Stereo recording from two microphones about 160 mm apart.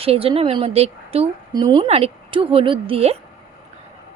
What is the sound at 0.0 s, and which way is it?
Speech, 35° right (ahead or behind).